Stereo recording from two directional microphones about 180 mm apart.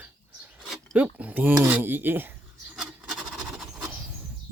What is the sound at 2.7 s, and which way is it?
Rub, 5° right (ahead or behind).